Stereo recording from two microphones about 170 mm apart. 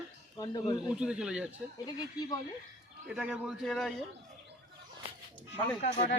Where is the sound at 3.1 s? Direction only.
5° right (ahead or behind).